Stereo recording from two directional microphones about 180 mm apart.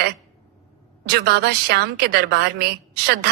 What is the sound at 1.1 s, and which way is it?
A woman's voice, 65° right (ahead or behind).